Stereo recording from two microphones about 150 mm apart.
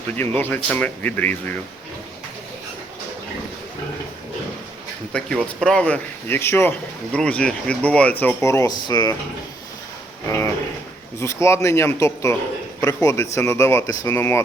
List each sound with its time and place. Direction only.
0.2 s speech: 15° left (ahead or behind)
5.1 s speech: 5° left (ahead or behind); by 9.1 s 30° left (ahead or behind)
11.2 s speech: 20° left (ahead or behind)